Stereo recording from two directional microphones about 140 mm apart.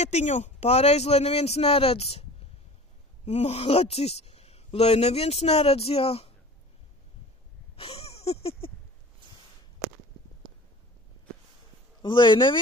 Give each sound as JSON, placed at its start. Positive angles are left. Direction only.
{"t": 0.0, "sound": "speech", "side_deg": 55}
{"t": 3.3, "sound": "speech", "side_deg": 50}
{"t": 7.7, "sound": "wheeze", "side_deg": 45}
{"t": 12.0, "sound": "speech", "side_deg": 35}